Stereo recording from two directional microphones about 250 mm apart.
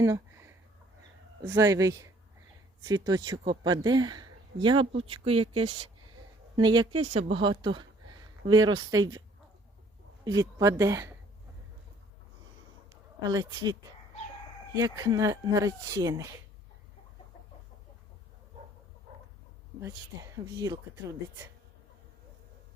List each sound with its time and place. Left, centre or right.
0.0 s a sound: centre
1.5 s speech: centre
6.6 s speech: centre
6.9 s speech: right
7.2 s speech: right
10.6 s speech: centre
13.2 s speech: centre
19.8 s speech: centre